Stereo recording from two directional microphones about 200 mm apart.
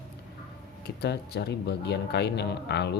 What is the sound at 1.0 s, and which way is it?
Speech, 55° left (ahead or behind).